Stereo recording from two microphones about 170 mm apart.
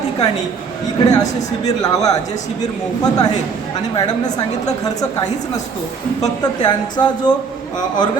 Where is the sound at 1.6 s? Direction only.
20° left (ahead or behind).